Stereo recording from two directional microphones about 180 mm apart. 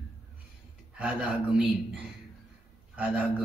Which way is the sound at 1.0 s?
5° right (ahead or behind).